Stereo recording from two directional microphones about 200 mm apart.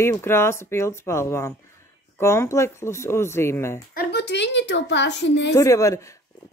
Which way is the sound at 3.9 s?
50° left (ahead or behind).